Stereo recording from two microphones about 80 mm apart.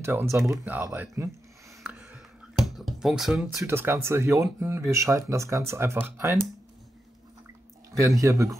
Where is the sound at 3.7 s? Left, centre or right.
Right.